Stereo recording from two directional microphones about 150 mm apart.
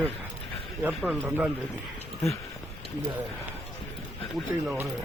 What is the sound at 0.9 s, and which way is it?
Speech, 5° right (ahead or behind).